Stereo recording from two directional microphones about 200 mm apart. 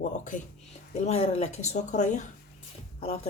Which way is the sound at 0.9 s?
35° left (ahead or behind).